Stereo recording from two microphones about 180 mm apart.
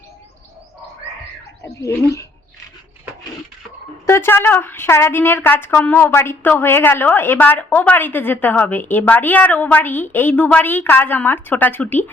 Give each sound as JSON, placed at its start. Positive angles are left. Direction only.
{"t": 1.6, "sound": "speech", "side_deg": 15}
{"t": 4.0, "sound": "a woman's voice", "side_deg": 15}